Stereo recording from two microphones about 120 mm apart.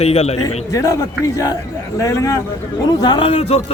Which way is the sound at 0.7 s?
30° left (ahead or behind).